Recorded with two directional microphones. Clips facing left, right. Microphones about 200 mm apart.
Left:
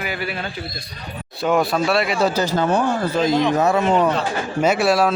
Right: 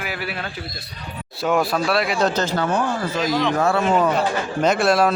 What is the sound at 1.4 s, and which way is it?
Speech, centre (ahead or behind).